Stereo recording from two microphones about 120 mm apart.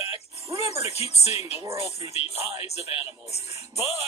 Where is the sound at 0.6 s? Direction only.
60° left (ahead or behind).